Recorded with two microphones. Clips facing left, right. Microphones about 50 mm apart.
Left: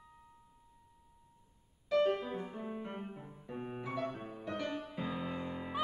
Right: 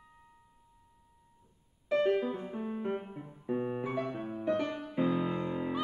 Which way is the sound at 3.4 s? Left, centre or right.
Right.